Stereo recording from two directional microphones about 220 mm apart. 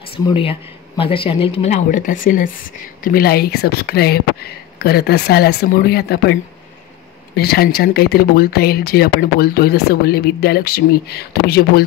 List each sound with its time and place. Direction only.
0.1 s speech: 25° left (ahead or behind); by 6.3 s 45° left (ahead or behind)
7.3 s speech: 45° left (ahead or behind)